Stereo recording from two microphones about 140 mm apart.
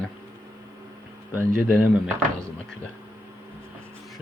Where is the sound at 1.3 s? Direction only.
15° right (ahead or behind).